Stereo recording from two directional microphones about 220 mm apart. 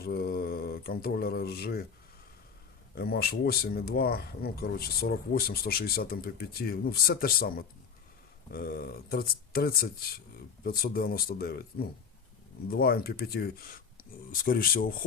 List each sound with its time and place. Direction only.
0.0 s speech: 45° left (ahead or behind)
2.9 s speech: 45° left (ahead or behind)
8.5 s speech: 45° left (ahead or behind)